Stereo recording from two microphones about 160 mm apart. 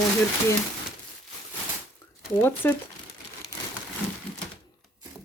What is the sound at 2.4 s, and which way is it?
Speech, 10° left (ahead or behind).